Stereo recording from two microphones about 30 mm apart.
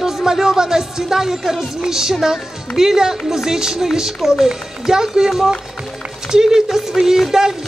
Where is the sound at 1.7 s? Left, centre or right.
Centre.